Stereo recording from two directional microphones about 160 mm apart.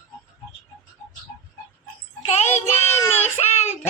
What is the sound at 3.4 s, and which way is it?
Child singing, 40° left (ahead or behind).